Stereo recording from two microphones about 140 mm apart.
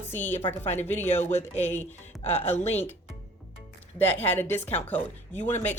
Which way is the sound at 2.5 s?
50° left (ahead or behind).